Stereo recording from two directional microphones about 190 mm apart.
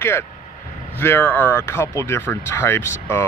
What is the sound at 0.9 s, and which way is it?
Speech, 10° left (ahead or behind).